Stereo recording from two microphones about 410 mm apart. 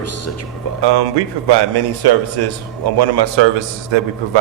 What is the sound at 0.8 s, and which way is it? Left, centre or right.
A man's voice, right.